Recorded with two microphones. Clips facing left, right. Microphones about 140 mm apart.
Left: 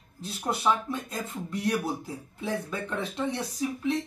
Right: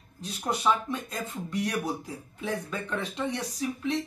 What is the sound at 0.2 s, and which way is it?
Speech, 5° left (ahead or behind).